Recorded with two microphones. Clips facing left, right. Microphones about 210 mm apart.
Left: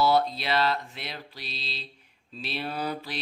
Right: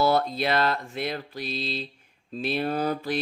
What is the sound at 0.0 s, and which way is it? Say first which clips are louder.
Speech: right 1 dB; 50° right (ahead or behind).